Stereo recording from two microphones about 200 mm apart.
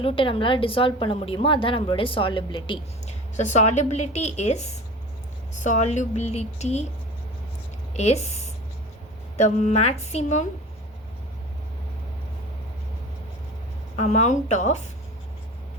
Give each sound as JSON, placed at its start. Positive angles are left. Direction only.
{"t": 0.0, "sound": "a woman's voice", "side_deg": 25}
{"t": 7.9, "sound": "speech", "side_deg": 35}
{"t": 13.9, "sound": "speech", "side_deg": 35}